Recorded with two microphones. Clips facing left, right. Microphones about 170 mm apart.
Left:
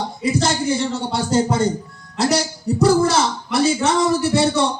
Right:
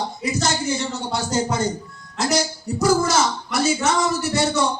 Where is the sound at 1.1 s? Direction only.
30° left (ahead or behind).